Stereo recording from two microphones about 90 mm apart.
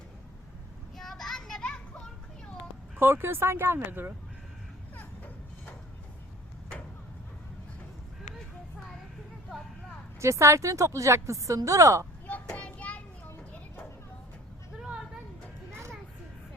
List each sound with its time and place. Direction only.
0.9 s children playing: centre (ahead or behind)
2.9 s speech: 25° right (ahead or behind)
10.2 s speech: 35° right (ahead or behind)
12.3 s child singing: 15° left (ahead or behind)
14.8 s a sound: 5° right (ahead or behind)
15.7 s a sound: 30° right (ahead or behind)